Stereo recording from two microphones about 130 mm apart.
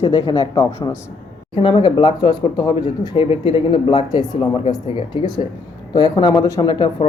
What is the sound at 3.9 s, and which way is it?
Speech, 35° left (ahead or behind).